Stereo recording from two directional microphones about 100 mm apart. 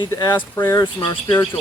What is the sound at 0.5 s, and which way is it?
Speech, 30° left (ahead or behind).